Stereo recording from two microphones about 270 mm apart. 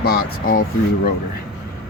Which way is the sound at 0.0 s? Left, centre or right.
Left.